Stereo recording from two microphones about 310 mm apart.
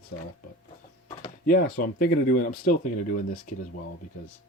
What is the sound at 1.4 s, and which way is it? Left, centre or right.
Speech, left.